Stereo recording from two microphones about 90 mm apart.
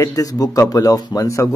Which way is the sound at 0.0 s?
40° left (ahead or behind).